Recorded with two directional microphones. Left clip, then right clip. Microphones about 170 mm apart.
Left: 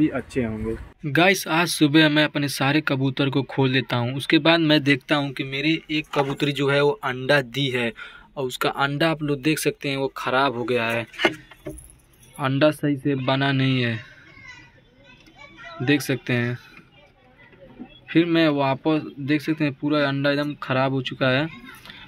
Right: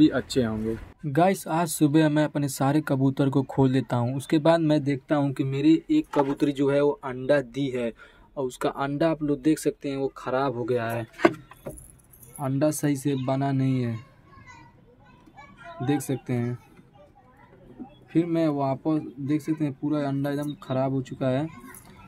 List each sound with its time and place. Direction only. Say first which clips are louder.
0.0 s speech: right 2 dB; 15° right (ahead or behind)
5.2 s speech: right 1 dB; 35° right (ahead or behind)
6.3 s speech: left 2 dB; 15° right (ahead or behind)
12.5 s speech: left 5 dB; 5° right (ahead or behind)
15.8 s speech: left 6 dB; centre (ahead or behind)
18.1 s speech: left 5 dB; centre (ahead or behind)